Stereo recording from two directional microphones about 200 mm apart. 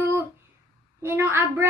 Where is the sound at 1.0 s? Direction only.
10° right (ahead or behind).